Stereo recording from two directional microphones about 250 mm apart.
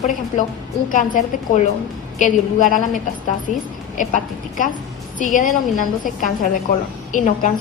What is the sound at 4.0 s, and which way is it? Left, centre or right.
Speech, left.